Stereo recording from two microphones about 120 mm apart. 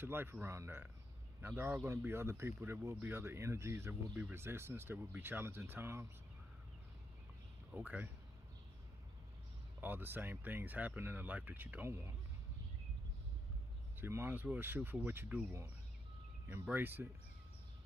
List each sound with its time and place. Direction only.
0.0 s speech: 20° right (ahead or behind)
7.7 s speech: 15° right (ahead or behind)
9.8 s speech: 15° right (ahead or behind)
13.9 s speech: 20° right (ahead or behind)